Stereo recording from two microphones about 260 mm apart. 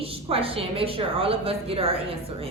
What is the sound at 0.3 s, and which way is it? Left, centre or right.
A woman's voice, right.